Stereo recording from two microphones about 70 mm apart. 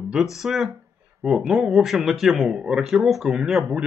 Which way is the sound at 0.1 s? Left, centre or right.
Centre.